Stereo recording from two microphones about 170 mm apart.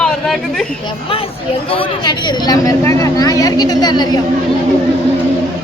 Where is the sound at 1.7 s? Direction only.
30° left (ahead or behind).